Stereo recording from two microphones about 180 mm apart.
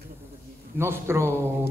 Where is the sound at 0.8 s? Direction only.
15° right (ahead or behind).